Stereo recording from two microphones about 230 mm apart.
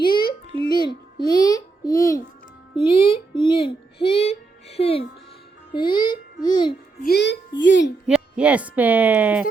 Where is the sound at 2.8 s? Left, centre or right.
Left.